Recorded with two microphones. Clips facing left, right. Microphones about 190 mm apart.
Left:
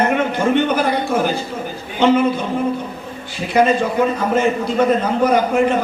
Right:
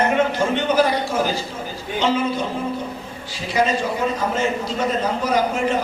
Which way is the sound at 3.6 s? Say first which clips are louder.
Left 5 dB; 55° left (ahead or behind).